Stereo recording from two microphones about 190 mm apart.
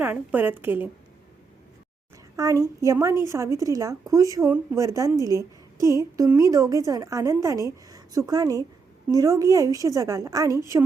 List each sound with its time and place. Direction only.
0.0 s a woman's voice: 10° right (ahead or behind)
2.3 s a woman's voice: 20° right (ahead or behind)